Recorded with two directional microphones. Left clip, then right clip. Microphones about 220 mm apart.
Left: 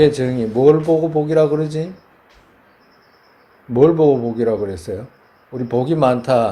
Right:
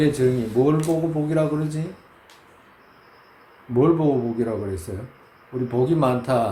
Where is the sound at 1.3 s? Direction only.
30° left (ahead or behind).